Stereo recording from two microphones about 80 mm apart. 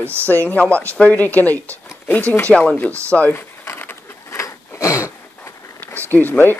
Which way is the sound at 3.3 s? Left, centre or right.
Left.